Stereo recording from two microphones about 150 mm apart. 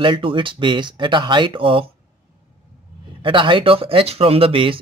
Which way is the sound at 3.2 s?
35° right (ahead or behind).